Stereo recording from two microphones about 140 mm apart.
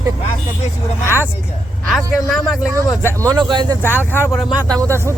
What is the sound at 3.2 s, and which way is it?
Speech, 30° right (ahead or behind).